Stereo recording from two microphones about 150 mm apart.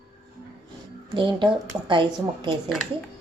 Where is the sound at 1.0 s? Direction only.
30° right (ahead or behind).